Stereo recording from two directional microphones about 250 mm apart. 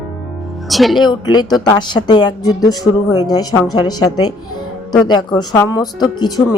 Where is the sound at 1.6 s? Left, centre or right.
Centre.